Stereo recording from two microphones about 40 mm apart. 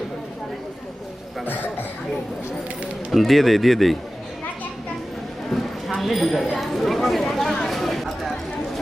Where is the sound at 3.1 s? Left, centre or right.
Centre.